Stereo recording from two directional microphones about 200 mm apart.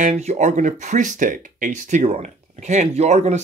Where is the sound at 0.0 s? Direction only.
35° right (ahead or behind).